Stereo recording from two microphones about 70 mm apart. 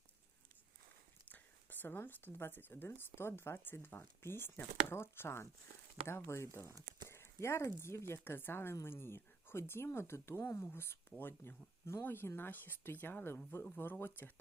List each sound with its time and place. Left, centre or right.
1.3 s speech: left
8.2 s speech: left